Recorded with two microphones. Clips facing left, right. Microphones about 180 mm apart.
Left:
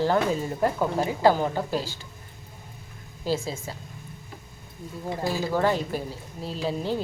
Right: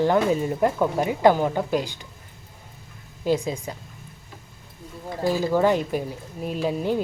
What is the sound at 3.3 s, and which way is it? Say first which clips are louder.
Speech: right 4 dB; 15° right (ahead or behind).